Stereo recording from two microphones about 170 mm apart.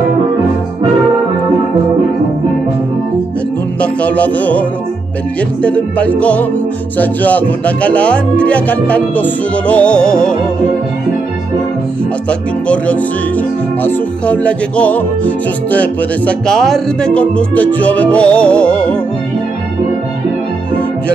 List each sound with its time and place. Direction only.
3.8 s music: 10° left (ahead or behind)
12.3 s music: 5° left (ahead or behind)